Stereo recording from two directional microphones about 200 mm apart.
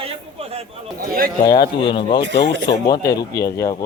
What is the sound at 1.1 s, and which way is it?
Speech, 50° right (ahead or behind).